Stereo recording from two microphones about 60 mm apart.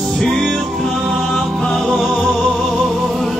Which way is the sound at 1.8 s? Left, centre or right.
Centre.